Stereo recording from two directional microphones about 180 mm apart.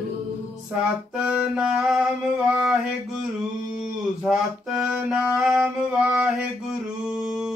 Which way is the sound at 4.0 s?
5° right (ahead or behind).